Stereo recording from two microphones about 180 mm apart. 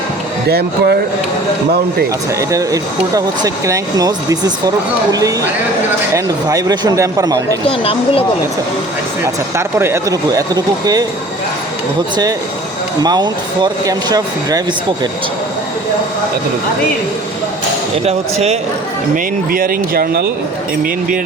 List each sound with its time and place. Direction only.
0.4 s speech: 60° right (ahead or behind)
2.4 s speech: 20° right (ahead or behind)
6.1 s speech: 20° right (ahead or behind)
7.7 s speech: 30° left (ahead or behind)
9.2 s speech: 15° right (ahead or behind)
13.0 s speech: 20° right (ahead or behind)
19.1 s speech: 55° right (ahead or behind)